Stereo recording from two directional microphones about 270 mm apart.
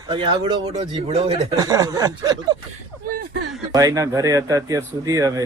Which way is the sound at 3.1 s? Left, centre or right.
Right.